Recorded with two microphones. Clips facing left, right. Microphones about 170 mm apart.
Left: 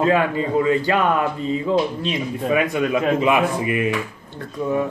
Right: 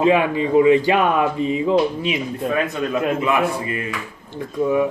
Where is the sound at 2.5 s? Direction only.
15° left (ahead or behind).